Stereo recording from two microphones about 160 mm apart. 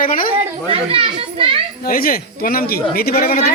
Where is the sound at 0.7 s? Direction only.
35° right (ahead or behind).